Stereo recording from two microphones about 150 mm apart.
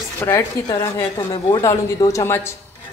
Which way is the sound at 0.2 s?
20° left (ahead or behind).